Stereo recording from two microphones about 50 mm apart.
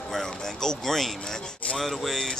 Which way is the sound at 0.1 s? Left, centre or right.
Centre.